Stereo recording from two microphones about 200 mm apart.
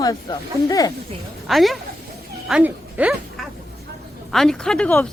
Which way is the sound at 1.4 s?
Centre (ahead or behind).